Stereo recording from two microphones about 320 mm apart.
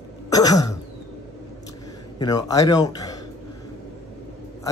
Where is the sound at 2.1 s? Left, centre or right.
Centre.